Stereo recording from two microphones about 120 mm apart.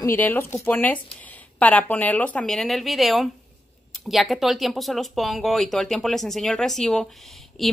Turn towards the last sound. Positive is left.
turn(degrees=0)  # may be behind; listen again after turning